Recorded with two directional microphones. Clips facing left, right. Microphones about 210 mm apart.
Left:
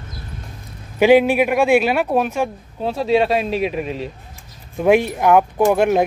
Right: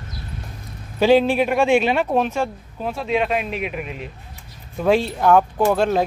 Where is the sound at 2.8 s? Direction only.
30° left (ahead or behind).